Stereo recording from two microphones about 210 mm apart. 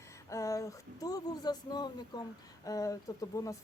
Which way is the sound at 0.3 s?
15° left (ahead or behind).